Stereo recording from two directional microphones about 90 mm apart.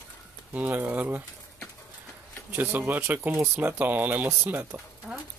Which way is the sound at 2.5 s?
25° right (ahead or behind).